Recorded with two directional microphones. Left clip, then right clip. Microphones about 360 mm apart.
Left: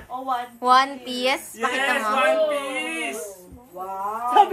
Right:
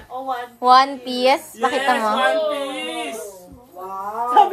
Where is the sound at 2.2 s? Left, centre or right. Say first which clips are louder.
Right 1 dB; centre.